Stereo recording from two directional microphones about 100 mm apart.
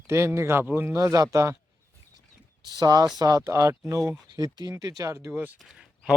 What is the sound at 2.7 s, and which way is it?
Speech, 40° right (ahead or behind).